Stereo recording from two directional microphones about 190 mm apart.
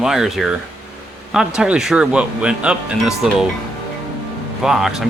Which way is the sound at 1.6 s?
5° right (ahead or behind).